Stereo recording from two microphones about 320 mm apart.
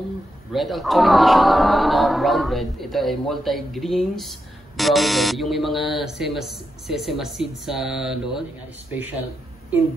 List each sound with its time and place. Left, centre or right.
0.5 s speech: centre